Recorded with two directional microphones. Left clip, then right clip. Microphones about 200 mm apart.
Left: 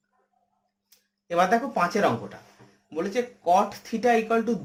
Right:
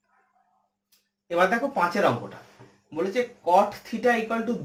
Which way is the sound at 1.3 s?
55° left (ahead or behind).